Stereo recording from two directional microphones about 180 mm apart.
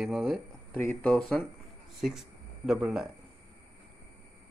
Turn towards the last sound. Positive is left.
turn(degrees=0)  # may be behind; listen again after turning